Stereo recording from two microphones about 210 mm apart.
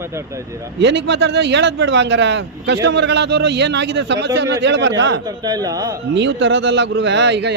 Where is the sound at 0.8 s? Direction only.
55° right (ahead or behind).